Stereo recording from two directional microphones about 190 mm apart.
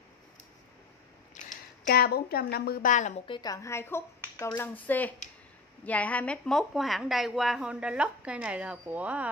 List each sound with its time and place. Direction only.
1.4 s a sound: 40° left (ahead or behind)
1.9 s a woman's voice: 55° left (ahead or behind)
3.3 s a woman's voice: 20° left (ahead or behind); by 9.3 s 5° right (ahead or behind)